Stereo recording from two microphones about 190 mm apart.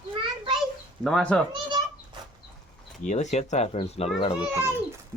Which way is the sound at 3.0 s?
40° left (ahead or behind).